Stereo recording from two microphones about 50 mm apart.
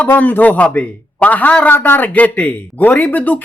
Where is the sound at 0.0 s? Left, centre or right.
Left.